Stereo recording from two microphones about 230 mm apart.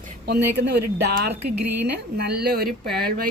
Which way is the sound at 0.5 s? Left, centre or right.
Right.